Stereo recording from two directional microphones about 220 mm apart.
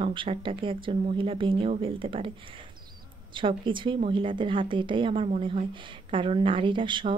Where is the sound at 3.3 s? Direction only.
20° right (ahead or behind).